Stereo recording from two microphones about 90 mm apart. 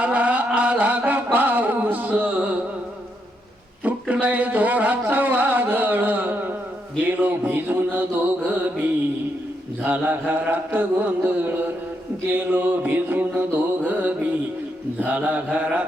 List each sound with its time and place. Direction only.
0.0 s music: 15° right (ahead or behind)
4.1 s a sound: 15° right (ahead or behind)
7.0 s mantra: 20° right (ahead or behind)